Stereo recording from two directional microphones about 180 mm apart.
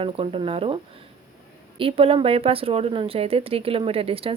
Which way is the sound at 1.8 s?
30° right (ahead or behind).